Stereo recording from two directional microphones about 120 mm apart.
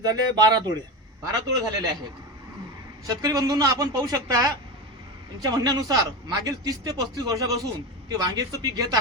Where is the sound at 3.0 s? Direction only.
30° right (ahead or behind).